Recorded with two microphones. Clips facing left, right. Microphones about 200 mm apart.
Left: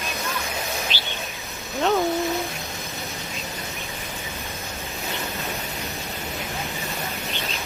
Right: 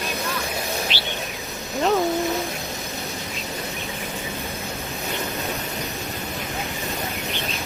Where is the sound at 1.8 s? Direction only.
Centre (ahead or behind).